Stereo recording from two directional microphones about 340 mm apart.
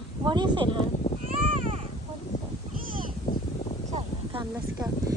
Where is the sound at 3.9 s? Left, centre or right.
Centre.